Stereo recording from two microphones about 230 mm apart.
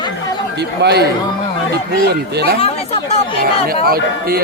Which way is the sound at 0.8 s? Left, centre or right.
Right.